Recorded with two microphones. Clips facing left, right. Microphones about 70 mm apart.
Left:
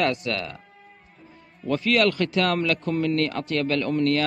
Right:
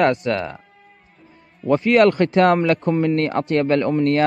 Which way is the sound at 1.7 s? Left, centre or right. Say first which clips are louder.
Right 7 dB; right.